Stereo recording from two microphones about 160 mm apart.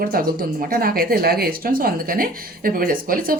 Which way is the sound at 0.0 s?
65° right (ahead or behind).